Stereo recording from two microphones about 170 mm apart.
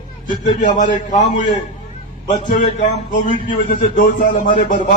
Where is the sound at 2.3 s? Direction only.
45° left (ahead or behind).